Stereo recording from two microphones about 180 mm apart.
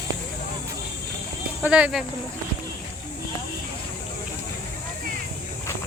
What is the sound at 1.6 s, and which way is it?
Speech, 10° right (ahead or behind).